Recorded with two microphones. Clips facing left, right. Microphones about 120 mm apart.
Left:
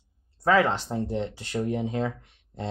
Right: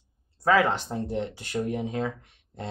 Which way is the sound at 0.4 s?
25° left (ahead or behind).